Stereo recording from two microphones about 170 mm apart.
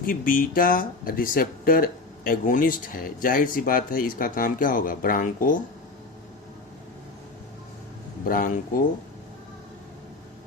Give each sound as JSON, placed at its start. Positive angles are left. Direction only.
{"t": 0.0, "sound": "speech", "side_deg": 55}
{"t": 8.3, "sound": "speech", "side_deg": 55}